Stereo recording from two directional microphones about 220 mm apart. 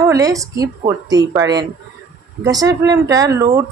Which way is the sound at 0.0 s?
15° right (ahead or behind).